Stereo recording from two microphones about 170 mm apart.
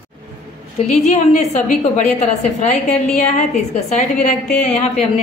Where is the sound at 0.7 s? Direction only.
40° left (ahead or behind).